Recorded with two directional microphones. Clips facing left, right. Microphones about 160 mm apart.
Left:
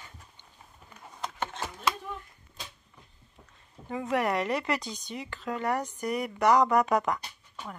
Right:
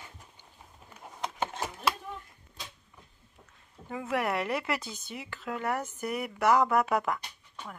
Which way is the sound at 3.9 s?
5° right (ahead or behind).